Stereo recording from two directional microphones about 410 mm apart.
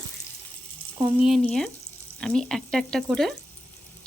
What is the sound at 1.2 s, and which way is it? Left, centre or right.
Speech, centre.